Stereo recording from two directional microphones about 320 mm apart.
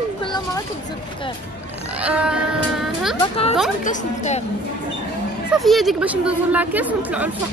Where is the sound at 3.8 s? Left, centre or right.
Left.